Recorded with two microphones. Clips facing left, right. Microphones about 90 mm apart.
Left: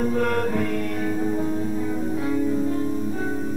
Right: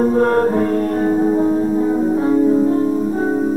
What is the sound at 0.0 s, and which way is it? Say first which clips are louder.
Music: right 9 dB; 35° right (ahead or behind).